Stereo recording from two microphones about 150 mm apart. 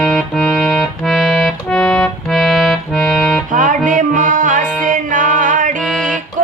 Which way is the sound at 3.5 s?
60° right (ahead or behind).